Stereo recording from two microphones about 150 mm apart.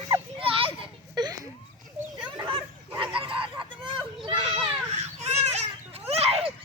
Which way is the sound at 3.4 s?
35° right (ahead or behind).